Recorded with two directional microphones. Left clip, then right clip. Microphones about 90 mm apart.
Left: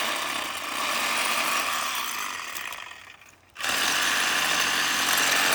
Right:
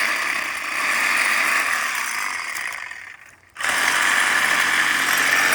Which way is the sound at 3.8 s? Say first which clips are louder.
Right 6 dB; centre (ahead or behind).